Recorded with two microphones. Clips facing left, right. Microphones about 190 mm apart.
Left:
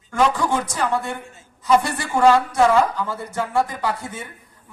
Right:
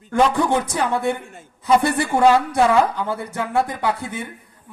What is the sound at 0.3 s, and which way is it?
Speech, 60° right (ahead or behind).